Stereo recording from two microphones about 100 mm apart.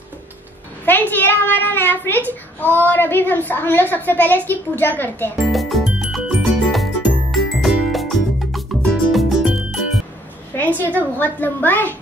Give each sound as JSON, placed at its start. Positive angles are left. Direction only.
{"t": 0.8, "sound": "a child's voice", "side_deg": 20}
{"t": 5.5, "sound": "music", "side_deg": 0}
{"t": 10.5, "sound": "a sound", "side_deg": 20}
{"t": 11.1, "sound": "a child's voice", "side_deg": 20}